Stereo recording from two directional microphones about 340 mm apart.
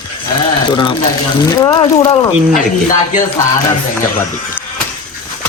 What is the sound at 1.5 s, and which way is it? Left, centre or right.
Speech, centre.